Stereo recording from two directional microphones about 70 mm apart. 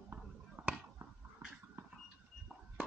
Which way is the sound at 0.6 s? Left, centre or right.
Right.